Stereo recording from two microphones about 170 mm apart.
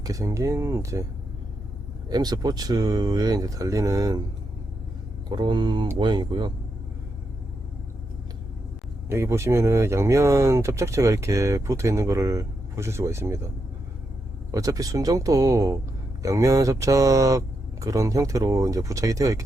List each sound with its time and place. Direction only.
0.0 s speech: 20° right (ahead or behind)
2.0 s speech: 25° right (ahead or behind)
5.3 s speech: 25° right (ahead or behind)
9.0 s speech: 15° right (ahead or behind)
14.5 s speech: 20° right (ahead or behind)